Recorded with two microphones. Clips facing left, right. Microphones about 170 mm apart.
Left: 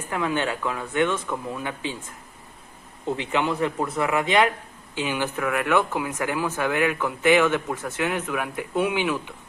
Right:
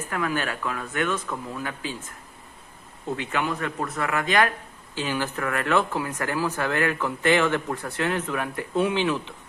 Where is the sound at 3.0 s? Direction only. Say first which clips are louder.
Left 3 dB; 20° left (ahead or behind).